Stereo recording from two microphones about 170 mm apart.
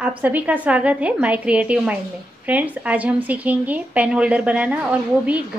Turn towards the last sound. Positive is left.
turn(degrees=-10)  # may be behind; listen again after turning